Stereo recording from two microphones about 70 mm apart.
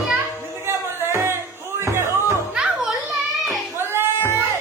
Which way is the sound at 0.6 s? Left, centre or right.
Right.